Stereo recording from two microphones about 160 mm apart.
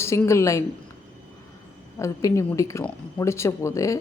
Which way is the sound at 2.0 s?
20° left (ahead or behind).